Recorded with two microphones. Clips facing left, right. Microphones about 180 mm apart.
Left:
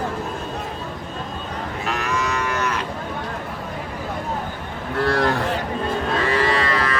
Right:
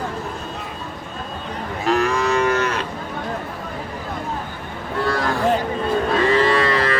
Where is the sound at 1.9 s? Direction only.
35° right (ahead or behind).